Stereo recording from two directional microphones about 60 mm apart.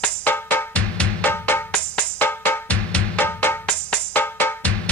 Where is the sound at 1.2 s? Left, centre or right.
Left.